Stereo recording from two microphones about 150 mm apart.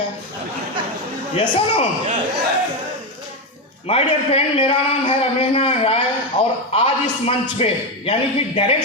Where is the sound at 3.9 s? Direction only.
40° left (ahead or behind).